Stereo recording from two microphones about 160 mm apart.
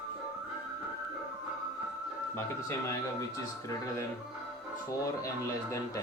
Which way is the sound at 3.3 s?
20° left (ahead or behind).